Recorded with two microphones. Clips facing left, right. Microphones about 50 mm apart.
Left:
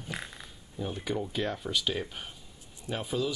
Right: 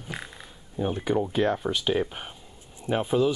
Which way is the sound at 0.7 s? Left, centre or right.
Right.